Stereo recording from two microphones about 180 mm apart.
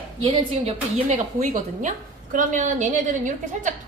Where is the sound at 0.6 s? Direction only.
35° right (ahead or behind).